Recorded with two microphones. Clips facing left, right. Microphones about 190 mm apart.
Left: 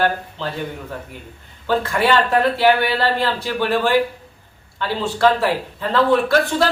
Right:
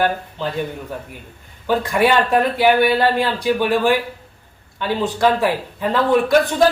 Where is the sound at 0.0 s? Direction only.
15° right (ahead or behind).